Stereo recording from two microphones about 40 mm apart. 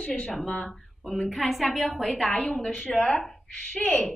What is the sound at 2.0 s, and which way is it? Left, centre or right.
A woman's voice, centre.